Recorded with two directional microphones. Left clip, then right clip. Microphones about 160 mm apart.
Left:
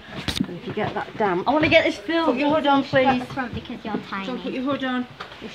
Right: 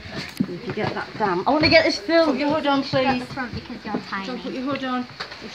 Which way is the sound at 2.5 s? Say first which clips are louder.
Left 2 dB; 40° left (ahead or behind).